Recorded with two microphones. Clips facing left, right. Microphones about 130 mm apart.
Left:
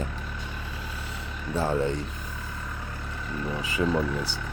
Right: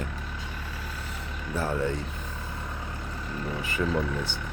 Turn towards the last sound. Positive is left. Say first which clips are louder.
# left 2 dB
turn(degrees=10)  # may be behind; listen again after turning